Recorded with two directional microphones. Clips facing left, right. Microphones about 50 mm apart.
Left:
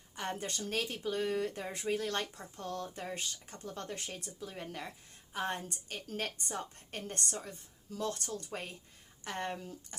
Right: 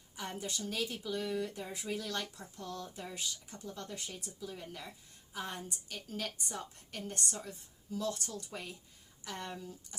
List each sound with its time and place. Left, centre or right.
0.2 s speech: left